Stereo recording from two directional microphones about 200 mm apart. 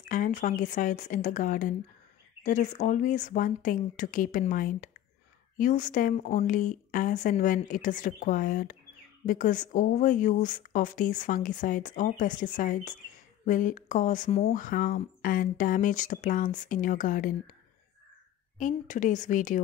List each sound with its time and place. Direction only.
0.0 s speech: 40° left (ahead or behind)
18.6 s speech: 40° left (ahead or behind)